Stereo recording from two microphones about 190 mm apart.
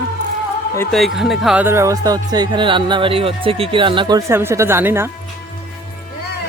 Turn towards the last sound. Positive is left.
turn(degrees=-10)  # may be behind; listen again after turning